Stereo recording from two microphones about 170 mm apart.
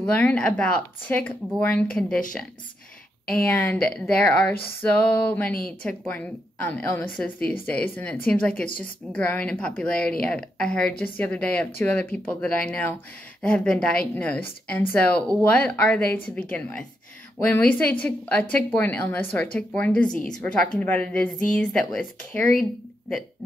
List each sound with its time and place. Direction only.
0.0 s a woman's voice: 5° left (ahead or behind)
3.3 s a woman's voice: 10° left (ahead or behind)
8.6 s a woman's voice: 55° left (ahead or behind)
9.1 s a woman's voice: 10° left (ahead or behind)